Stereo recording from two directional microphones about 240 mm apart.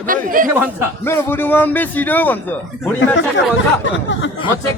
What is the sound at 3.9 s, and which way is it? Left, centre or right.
Speech, left.